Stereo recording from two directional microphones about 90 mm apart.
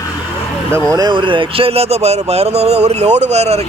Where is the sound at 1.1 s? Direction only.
65° right (ahead or behind); by 1.9 s 90° right.